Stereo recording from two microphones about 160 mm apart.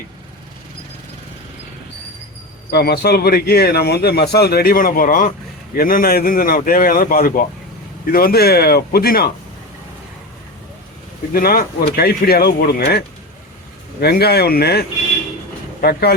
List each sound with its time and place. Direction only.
2.6 s a man's voice: 85° left
11.3 s speech: 65° left (ahead or behind)
14.0 s a man's voice: 85° left